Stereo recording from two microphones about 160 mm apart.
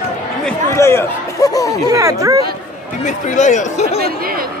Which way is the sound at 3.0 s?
50° left (ahead or behind).